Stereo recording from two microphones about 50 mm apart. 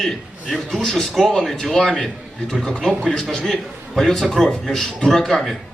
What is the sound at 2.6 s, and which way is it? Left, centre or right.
A man's voice, centre.